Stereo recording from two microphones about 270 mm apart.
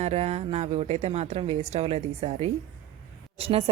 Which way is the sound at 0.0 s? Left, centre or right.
Right.